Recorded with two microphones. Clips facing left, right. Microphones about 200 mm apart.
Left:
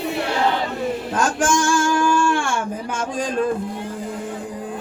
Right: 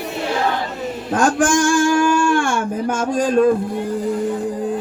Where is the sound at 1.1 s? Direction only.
55° right (ahead or behind).